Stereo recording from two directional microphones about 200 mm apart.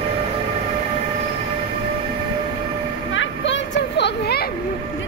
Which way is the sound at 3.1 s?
65° left (ahead or behind).